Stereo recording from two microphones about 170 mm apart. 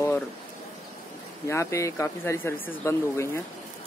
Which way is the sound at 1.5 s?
15° left (ahead or behind).